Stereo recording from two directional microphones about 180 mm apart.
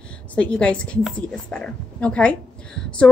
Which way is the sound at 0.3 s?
5° left (ahead or behind).